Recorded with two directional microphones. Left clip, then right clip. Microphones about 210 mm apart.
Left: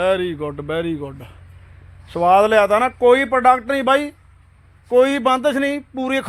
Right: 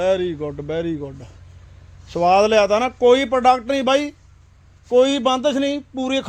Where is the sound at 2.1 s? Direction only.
20° right (ahead or behind).